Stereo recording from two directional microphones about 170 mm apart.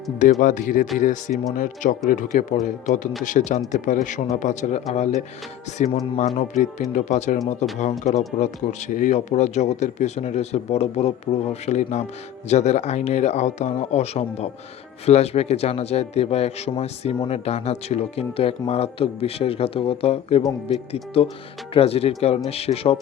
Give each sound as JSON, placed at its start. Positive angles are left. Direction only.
{"t": 0.2, "sound": "speech", "side_deg": 50}